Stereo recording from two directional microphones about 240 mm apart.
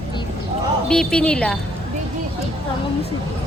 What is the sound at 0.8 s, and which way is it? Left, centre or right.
Speech, centre.